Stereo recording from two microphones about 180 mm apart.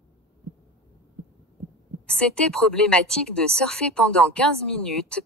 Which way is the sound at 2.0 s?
5° left (ahead or behind).